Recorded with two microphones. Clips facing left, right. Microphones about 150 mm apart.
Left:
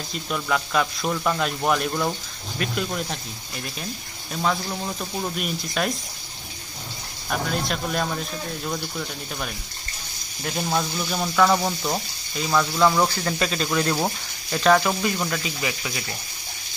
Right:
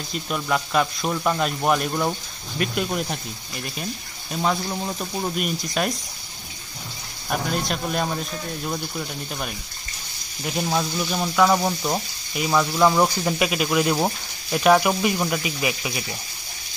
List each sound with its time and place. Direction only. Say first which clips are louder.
0.3 s a man's voice: right 1 dB; 5° right (ahead or behind)
4.3 s speech: right 1 dB; 15° right (ahead or behind)
5.8 s a man's voice: right 1 dB; 5° right (ahead or behind)
7.2 s a man's voice: right 1 dB; 5° right (ahead or behind)
10.4 s speech: right 1 dB; 5° right (ahead or behind)